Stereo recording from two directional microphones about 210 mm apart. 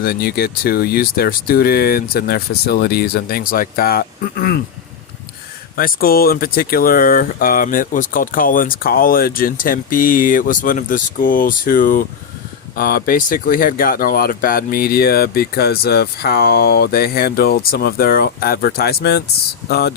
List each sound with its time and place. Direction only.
0.0 s speech: 45° left (ahead or behind)
5.7 s speech: 40° left (ahead or behind)